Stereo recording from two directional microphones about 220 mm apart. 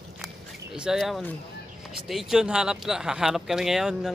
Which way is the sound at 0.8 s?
Centre (ahead or behind).